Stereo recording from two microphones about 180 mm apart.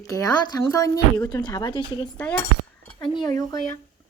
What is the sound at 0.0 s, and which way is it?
Speech, 20° left (ahead or behind).